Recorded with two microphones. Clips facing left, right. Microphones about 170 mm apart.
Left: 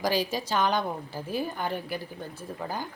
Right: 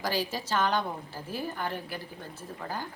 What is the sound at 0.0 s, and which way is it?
A woman's voice, 15° left (ahead or behind).